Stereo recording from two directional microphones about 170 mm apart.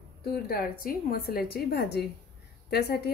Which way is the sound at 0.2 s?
60° left (ahead or behind).